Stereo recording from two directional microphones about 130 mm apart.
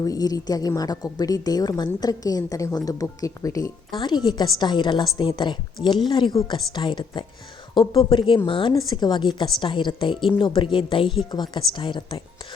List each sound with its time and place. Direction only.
0.0 s a woman's voice: 30° left (ahead or behind)